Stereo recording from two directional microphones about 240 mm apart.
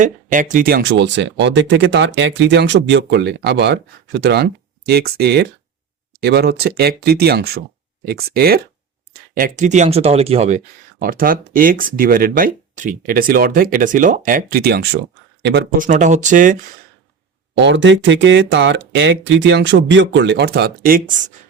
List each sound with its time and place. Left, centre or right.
0.0 s speech: right
11.0 s speech: right
15.9 s speech: right
17.6 s speech: right